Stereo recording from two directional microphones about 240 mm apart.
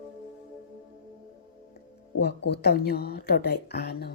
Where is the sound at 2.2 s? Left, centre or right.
Left.